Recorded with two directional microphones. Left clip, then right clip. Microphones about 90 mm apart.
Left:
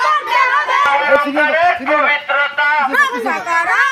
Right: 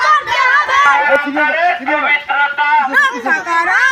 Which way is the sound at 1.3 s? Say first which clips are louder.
Even; 15° left (ahead or behind).